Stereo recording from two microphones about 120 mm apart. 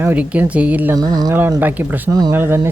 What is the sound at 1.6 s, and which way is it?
Speech, 15° right (ahead or behind).